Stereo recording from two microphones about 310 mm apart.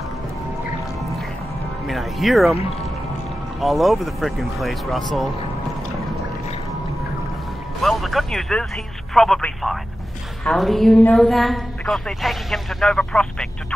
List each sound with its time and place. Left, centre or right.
1.9 s a woman's voice: centre
3.6 s a woman's voice: centre
7.8 s speech: centre
9.1 s a sound: centre
10.4 s a woman's voice: centre